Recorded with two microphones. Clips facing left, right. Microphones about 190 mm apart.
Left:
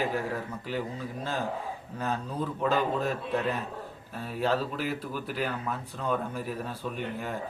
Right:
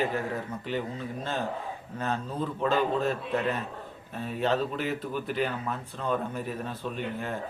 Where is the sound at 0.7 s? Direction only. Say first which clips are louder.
Right 1 dB; 5° left (ahead or behind).